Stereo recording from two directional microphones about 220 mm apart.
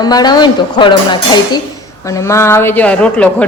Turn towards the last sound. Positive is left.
turn(degrees=5)  # may be behind; listen again after turning